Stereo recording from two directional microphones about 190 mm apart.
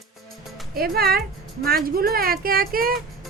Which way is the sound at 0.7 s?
50° right (ahead or behind).